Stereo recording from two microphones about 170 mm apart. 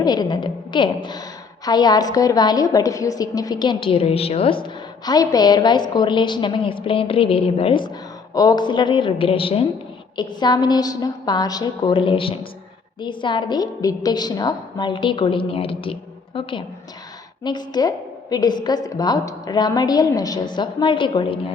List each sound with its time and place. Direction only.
0.0 s a woman's voice: 25° left (ahead or behind)